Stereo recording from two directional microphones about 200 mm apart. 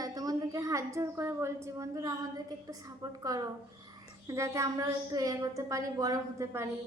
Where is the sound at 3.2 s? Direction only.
15° right (ahead or behind).